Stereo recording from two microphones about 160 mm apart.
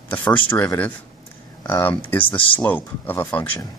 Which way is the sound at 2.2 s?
35° left (ahead or behind).